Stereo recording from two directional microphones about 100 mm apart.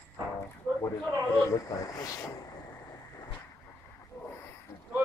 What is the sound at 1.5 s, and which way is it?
Speech, 35° left (ahead or behind).